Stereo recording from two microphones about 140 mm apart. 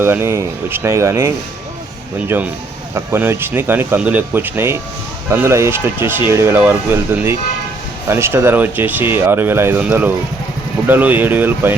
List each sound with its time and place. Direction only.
0.0 s speech: 15° right (ahead or behind)